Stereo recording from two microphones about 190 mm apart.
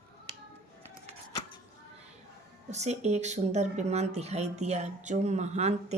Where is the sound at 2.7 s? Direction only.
35° right (ahead or behind).